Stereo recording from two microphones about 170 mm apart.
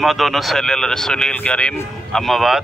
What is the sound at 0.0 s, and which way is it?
Speech, centre (ahead or behind).